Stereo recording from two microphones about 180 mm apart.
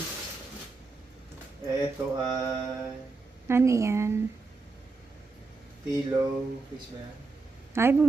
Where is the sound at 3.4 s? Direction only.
15° right (ahead or behind).